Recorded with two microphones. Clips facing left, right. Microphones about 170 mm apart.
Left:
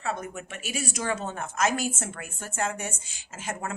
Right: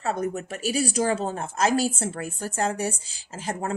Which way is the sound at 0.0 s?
40° right (ahead or behind).